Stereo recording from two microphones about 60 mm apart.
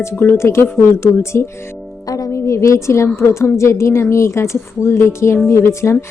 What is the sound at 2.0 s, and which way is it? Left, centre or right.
Music, left.